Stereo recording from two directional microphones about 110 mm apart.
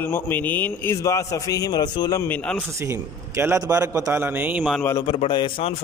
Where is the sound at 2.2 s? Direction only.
10° left (ahead or behind).